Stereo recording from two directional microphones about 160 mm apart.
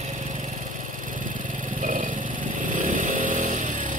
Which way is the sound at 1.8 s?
55° right (ahead or behind).